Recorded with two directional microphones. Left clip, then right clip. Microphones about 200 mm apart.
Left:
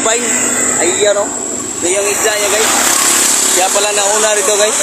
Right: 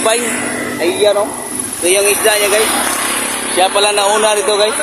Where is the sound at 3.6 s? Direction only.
45° right (ahead or behind).